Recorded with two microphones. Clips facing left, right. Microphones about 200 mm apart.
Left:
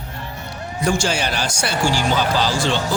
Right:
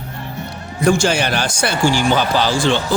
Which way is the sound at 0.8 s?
55° right (ahead or behind).